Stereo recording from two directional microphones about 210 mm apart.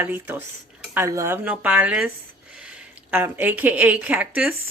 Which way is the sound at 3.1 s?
10° right (ahead or behind).